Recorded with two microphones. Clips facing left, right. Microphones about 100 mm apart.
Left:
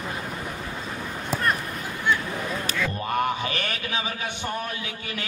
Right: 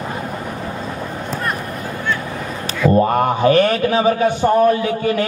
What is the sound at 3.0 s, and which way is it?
A man's voice, 45° right (ahead or behind).